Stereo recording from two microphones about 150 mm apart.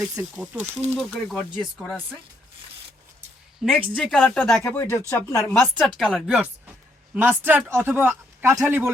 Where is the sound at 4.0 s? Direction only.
Centre (ahead or behind); by 5.4 s 15° left (ahead or behind).